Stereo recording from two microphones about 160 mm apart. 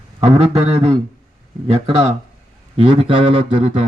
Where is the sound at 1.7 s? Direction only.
40° right (ahead or behind).